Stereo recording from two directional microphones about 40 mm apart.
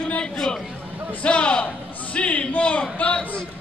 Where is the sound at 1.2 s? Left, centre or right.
Left.